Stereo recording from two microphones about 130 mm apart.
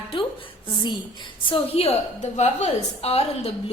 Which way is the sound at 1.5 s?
50° left (ahead or behind).